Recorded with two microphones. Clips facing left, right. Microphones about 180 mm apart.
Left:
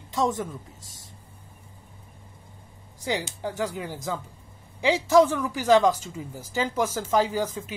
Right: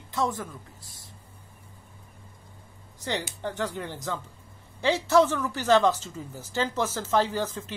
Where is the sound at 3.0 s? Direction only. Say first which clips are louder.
Left 2 dB; 10° left (ahead or behind).